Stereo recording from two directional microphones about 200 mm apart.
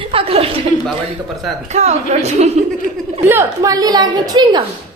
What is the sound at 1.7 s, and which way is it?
Speech, 35° right (ahead or behind).